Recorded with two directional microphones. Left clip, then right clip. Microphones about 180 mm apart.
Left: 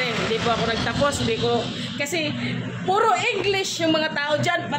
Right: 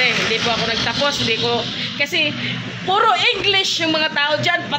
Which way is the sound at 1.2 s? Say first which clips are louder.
Right 4 dB; 5° right (ahead or behind).